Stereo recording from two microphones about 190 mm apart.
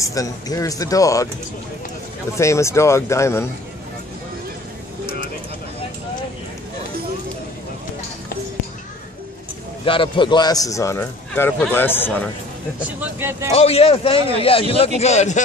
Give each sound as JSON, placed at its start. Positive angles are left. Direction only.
{"t": 0.0, "sound": "speech", "side_deg": 20}
{"t": 2.3, "sound": "speech", "side_deg": 15}
{"t": 9.8, "sound": "speech", "side_deg": 25}
{"t": 12.8, "sound": "speech", "side_deg": -10}
{"t": 13.5, "sound": "a man's voice", "side_deg": 30}